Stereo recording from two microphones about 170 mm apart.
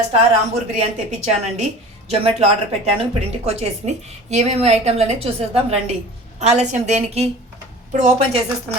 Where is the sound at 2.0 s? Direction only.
40° right (ahead or behind).